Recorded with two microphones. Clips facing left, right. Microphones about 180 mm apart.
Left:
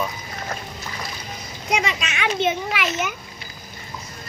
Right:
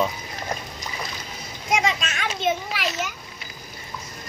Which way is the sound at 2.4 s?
70° left (ahead or behind).